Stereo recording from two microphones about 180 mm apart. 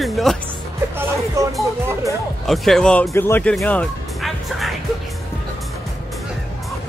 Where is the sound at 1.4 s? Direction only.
15° right (ahead or behind).